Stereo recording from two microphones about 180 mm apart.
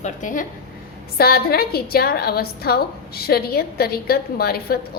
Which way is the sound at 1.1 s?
60° left (ahead or behind).